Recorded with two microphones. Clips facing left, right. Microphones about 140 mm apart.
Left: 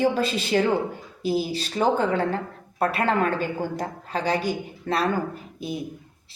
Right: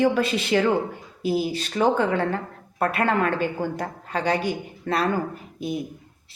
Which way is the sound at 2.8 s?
55° right (ahead or behind).